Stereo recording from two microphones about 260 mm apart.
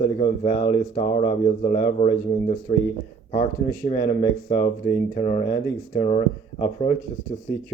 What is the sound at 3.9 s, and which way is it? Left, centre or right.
Speech, left.